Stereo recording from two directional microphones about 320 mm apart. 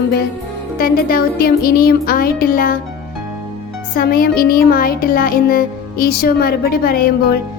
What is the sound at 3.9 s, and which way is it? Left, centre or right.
Music, left.